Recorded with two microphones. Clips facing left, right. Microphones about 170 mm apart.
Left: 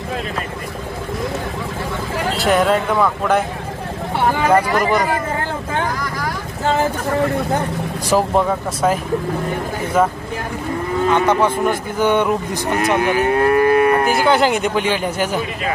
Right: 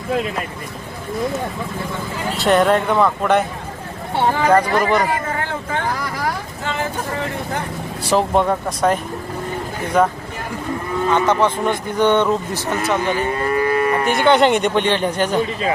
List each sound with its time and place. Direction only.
2.4 s speech: centre (ahead or behind)
4.5 s speech: 10° left (ahead or behind)
8.0 s speech: 5° left (ahead or behind)
12.7 s moo: 60° left (ahead or behind)
14.1 s speech: centre (ahead or behind)